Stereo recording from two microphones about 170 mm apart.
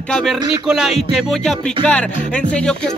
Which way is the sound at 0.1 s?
Centre (ahead or behind).